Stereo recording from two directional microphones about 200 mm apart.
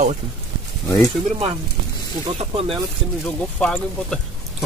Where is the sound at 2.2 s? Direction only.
25° right (ahead or behind).